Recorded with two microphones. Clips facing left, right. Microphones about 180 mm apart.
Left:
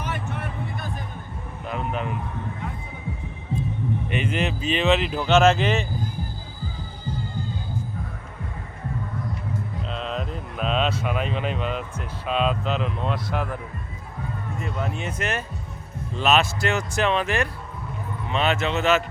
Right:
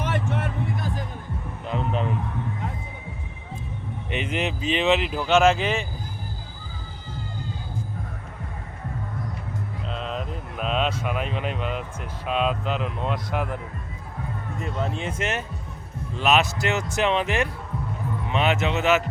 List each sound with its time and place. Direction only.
0.0 s music: 90° right
1.9 s a man's voice: 30° right (ahead or behind)
4.1 s speech: 20° right (ahead or behind)
9.9 s speech: 5° right (ahead or behind)
14.6 s speech: 30° right (ahead or behind)